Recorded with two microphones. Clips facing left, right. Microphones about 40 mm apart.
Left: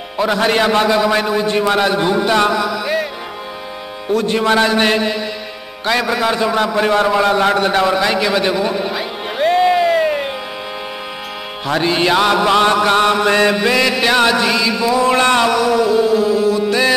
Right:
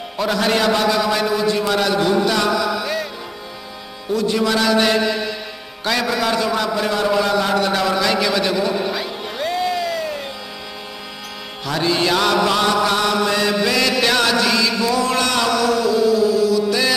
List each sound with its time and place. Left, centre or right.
0.2 s mantra: left
4.1 s a man's voice: left
5.9 s mantra: centre
6.7 s a man's voice: left
7.2 s a sound: left
11.6 s mantra: left
12.6 s a man's voice: left
13.6 s mantra: left